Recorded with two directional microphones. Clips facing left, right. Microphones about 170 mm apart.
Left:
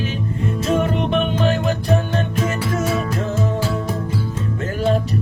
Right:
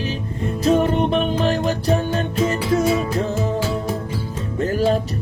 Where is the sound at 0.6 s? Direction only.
35° right (ahead or behind).